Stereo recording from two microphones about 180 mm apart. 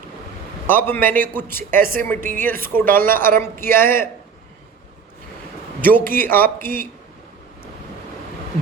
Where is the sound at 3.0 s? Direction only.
10° left (ahead or behind).